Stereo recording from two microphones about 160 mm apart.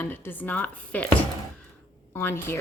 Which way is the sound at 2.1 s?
15° left (ahead or behind).